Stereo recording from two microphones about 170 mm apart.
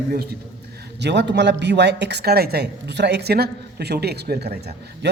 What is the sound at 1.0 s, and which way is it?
A man's voice, 90° right.